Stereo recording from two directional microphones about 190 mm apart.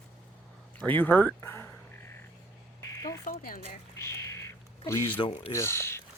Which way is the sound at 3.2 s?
45° left (ahead or behind).